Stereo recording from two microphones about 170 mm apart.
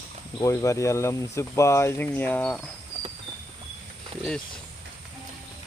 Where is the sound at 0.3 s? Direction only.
20° left (ahead or behind).